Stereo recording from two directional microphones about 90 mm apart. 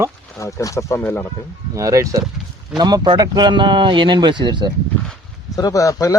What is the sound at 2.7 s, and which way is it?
Speech, 50° right (ahead or behind).